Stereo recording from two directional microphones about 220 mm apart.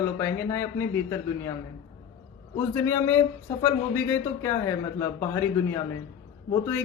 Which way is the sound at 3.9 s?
10° left (ahead or behind).